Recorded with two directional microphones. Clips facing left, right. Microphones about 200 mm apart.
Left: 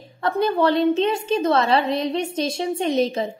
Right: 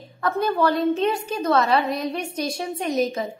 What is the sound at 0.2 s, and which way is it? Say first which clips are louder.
A woman's voice: left 2 dB; 25° left (ahead or behind).